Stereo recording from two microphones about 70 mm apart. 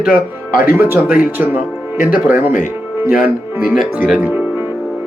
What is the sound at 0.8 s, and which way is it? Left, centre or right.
Speech, right.